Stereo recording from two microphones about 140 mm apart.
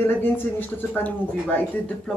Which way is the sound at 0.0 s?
15° left (ahead or behind).